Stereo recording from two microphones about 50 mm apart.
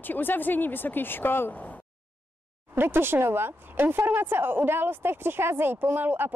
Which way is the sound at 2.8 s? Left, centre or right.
Right.